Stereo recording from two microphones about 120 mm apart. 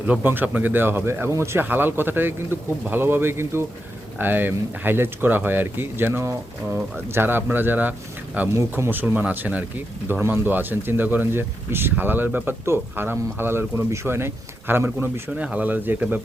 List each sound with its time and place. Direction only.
0.1 s speech: 15° right (ahead or behind)